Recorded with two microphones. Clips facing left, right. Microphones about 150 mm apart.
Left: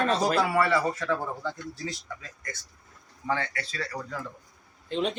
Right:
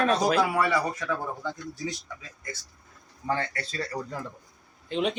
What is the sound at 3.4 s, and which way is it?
Speech, 45° right (ahead or behind).